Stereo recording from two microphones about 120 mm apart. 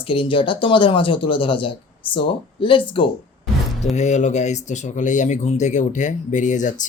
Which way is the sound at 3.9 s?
80° left.